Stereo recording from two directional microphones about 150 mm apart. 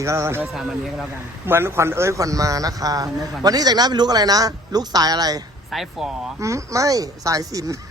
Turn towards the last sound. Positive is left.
turn(degrees=-25)  # may be behind; listen again after turning